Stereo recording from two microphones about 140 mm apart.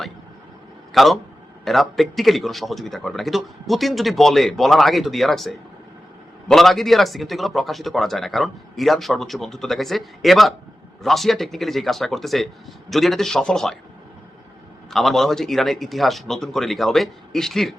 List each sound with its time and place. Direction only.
0.9 s a man's voice: centre (ahead or behind)
14.8 s a man's voice: centre (ahead or behind)